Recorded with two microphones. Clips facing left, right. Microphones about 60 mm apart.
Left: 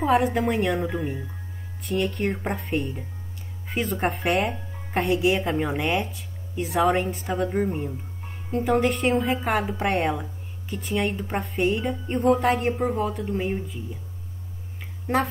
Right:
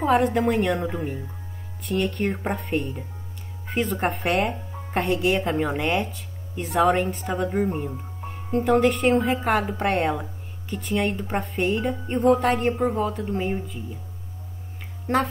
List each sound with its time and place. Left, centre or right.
0.0 s speech: centre